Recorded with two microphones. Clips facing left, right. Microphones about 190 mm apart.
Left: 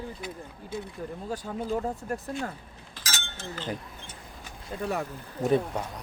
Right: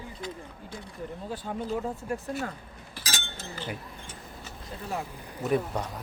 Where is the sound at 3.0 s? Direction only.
15° right (ahead or behind).